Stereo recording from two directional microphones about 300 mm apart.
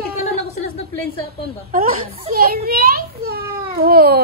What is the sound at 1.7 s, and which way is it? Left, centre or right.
A child's voice, right.